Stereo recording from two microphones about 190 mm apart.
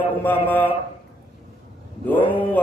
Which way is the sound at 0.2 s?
10° left (ahead or behind).